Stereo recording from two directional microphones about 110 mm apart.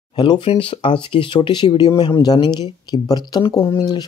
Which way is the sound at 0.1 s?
50° left (ahead or behind).